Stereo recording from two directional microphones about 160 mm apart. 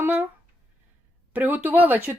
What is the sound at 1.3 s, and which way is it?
Speech, 10° right (ahead or behind).